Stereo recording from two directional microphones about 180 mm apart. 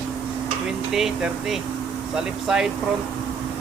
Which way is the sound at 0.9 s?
Centre (ahead or behind).